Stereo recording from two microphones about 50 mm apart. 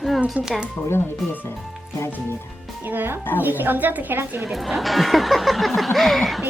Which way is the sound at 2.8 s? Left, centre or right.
Right.